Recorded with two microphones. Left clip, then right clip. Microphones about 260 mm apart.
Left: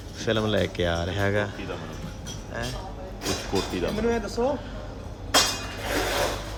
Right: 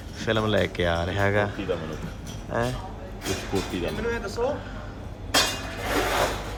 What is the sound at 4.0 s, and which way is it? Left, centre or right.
Speech, left.